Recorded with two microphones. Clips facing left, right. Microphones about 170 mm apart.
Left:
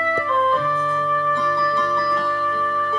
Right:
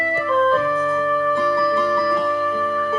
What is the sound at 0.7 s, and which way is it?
Music, 5° right (ahead or behind).